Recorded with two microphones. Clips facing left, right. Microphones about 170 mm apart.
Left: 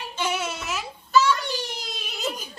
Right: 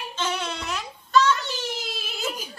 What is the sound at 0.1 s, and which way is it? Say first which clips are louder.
Child singing: left 2 dB; 10° left (ahead or behind).